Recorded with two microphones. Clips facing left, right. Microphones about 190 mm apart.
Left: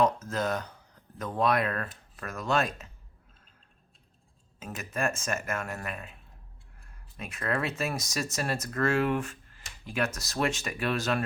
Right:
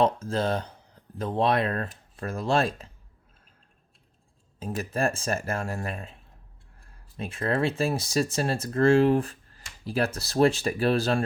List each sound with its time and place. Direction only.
0.0 s speech: 30° right (ahead or behind)
4.6 s speech: 35° right (ahead or behind)
7.2 s speech: 30° right (ahead or behind)